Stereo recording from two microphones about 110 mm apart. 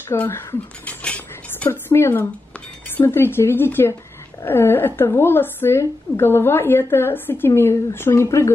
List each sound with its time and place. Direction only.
0.1 s a woman's voice: 20° left (ahead or behind)
1.0 s dishes: 10° left (ahead or behind)
1.7 s a woman's voice: 25° left (ahead or behind)